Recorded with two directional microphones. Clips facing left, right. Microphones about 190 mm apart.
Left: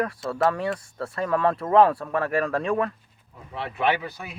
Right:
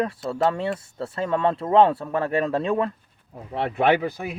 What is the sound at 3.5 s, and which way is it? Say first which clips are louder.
Speech: right 5 dB; 55° right (ahead or behind).